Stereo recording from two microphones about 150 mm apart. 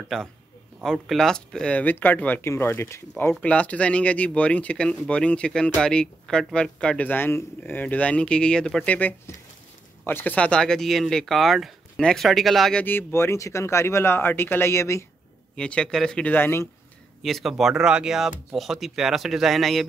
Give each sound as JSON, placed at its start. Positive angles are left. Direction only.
{"t": 0.1, "sound": "speech", "side_deg": 5}
{"t": 12.8, "sound": "speech", "side_deg": 15}
{"t": 15.5, "sound": "speech", "side_deg": 5}
{"t": 17.2, "sound": "speech", "side_deg": 0}